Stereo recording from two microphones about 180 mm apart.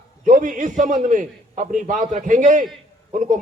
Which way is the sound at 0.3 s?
45° right (ahead or behind).